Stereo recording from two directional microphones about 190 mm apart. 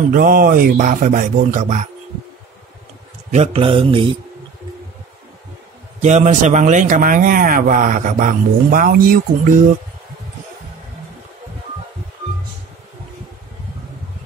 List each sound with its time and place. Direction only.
0.1 s speech: 45° right (ahead or behind)
3.3 s mantra: 35° right (ahead or behind)
5.9 s speech: 35° right (ahead or behind)